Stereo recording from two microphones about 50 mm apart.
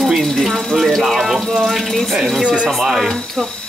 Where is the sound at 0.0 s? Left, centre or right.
Centre.